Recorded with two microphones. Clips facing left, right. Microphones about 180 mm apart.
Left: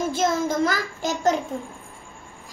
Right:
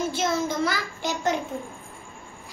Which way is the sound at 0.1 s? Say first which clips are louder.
Left 3 dB; 45° left (ahead or behind).